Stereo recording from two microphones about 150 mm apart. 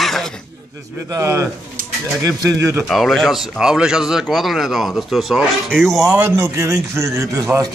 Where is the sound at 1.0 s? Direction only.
20° right (ahead or behind).